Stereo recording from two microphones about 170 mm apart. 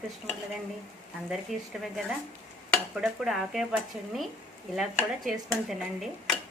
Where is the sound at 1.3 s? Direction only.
Centre (ahead or behind).